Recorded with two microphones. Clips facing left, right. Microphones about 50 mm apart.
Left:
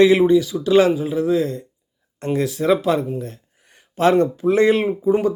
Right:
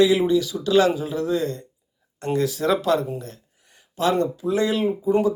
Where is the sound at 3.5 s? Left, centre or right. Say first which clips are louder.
Left 5 dB; left.